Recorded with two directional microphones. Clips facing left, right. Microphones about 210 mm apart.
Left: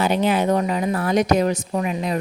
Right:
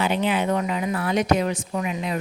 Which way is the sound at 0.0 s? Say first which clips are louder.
Left 3 dB; 40° left (ahead or behind).